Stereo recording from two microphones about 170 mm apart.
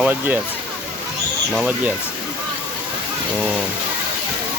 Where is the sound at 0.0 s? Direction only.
10° right (ahead or behind).